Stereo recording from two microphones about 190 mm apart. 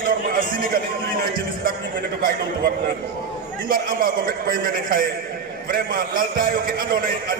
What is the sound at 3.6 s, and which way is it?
A man's voice, 50° right (ahead or behind).